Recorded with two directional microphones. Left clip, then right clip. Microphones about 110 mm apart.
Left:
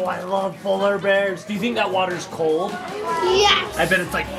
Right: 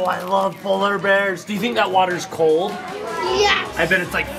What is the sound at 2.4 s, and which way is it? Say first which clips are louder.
Speech: right 4 dB; 45° right (ahead or behind).